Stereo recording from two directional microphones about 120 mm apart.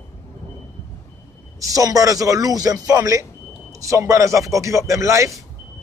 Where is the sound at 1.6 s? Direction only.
30° right (ahead or behind).